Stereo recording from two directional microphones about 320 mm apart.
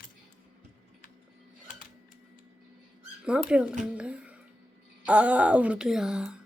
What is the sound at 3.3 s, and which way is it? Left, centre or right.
Speech, centre.